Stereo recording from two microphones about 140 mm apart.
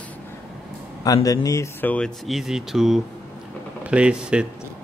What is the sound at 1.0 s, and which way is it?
Speech, 25° left (ahead or behind).